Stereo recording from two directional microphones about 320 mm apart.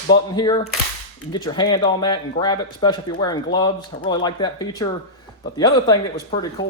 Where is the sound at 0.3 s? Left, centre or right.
Centre.